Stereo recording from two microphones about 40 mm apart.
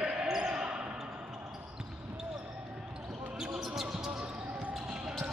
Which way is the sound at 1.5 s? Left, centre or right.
Centre.